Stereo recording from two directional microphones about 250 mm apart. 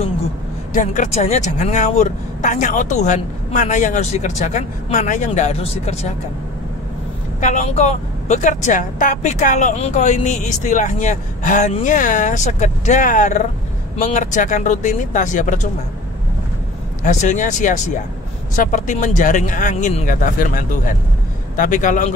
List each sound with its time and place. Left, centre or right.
0.7 s speech: left
7.3 s speech: left
17.0 s speech: left